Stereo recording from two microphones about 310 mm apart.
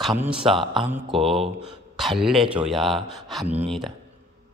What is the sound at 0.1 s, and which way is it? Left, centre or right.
A man's voice, centre.